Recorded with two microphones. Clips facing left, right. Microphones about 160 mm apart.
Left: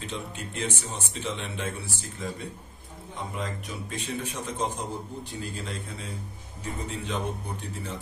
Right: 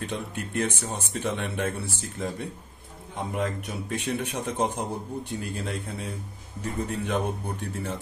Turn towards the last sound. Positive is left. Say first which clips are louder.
# right 4 dB
turn(degrees=-55)  # may be behind; listen again after turning